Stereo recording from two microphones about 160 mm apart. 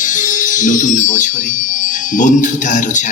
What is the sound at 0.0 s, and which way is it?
Speech, 50° left (ahead or behind).